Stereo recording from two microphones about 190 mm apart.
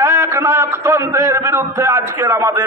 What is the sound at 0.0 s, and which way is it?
A man's voice, 15° right (ahead or behind).